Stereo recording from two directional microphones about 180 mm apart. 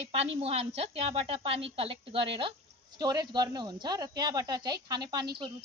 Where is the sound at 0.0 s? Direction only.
35° right (ahead or behind).